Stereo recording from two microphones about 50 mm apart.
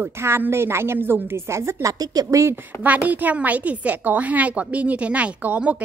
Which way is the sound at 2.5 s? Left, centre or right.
Right.